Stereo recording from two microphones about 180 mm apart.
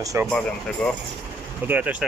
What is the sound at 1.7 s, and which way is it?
Speech, 5° right (ahead or behind).